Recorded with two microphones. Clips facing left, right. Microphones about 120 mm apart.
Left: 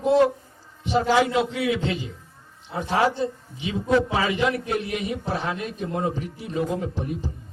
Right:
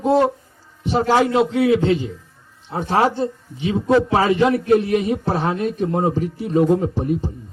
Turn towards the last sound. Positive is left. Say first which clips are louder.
# right 9 dB
turn(degrees=-40)  # may be behind; listen again after turning